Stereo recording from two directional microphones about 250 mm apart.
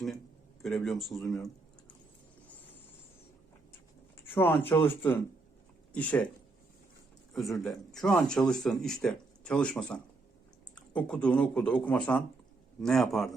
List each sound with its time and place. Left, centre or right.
0.6 s speech: centre
4.4 s speech: centre
7.3 s speech: centre